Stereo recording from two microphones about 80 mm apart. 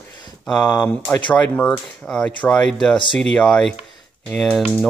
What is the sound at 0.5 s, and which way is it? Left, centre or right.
Speech, centre.